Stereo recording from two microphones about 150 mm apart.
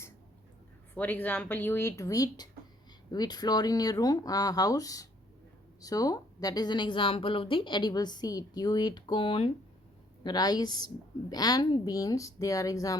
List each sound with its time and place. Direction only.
0.9 s a woman's voice: 10° left (ahead or behind)